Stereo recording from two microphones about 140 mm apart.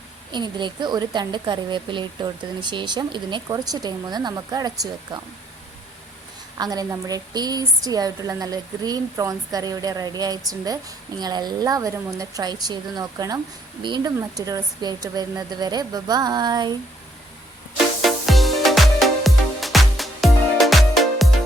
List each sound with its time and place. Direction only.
0.3 s a woman's voice: 35° right (ahead or behind)
6.6 s a woman's voice: 30° right (ahead or behind)
18.0 s music: centre (ahead or behind)